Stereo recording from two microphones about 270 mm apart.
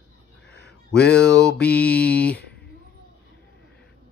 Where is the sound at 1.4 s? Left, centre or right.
Centre.